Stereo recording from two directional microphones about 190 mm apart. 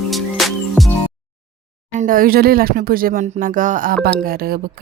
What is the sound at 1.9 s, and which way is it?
Speech, 45° right (ahead or behind).